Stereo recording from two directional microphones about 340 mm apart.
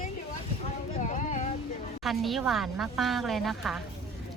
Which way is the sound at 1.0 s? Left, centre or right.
Left.